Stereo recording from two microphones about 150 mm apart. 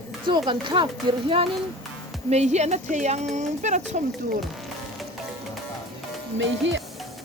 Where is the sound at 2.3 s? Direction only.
50° right (ahead or behind).